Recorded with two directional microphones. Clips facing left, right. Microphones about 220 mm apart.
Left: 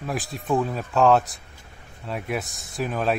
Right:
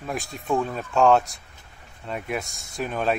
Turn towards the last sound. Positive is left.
turn(degrees=0)  # may be behind; listen again after turning